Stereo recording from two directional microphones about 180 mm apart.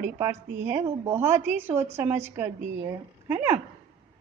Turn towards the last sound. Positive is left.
turn(degrees=-10)  # may be behind; listen again after turning